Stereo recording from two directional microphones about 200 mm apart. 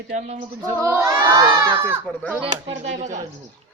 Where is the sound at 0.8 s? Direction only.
15° right (ahead or behind).